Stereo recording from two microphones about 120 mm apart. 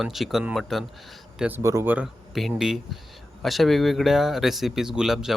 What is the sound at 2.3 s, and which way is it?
Speech, 5° right (ahead or behind).